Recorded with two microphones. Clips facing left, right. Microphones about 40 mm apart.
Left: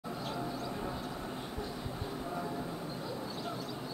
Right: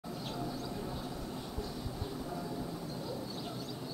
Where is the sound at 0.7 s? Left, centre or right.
Left.